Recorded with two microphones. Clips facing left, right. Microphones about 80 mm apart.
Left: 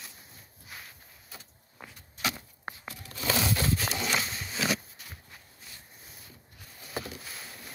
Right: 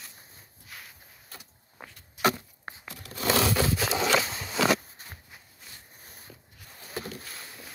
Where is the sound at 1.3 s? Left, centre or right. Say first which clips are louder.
Right 1 dB; centre.